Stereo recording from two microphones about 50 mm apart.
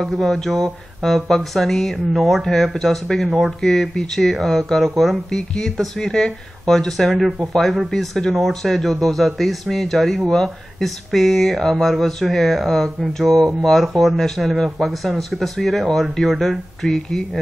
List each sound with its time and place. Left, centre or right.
0.0 s speech: centre